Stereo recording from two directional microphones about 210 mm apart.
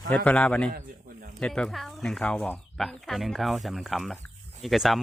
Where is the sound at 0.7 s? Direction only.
45° right (ahead or behind).